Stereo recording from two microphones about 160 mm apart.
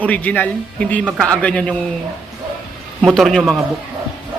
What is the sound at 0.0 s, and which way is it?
Speech, 10° left (ahead or behind).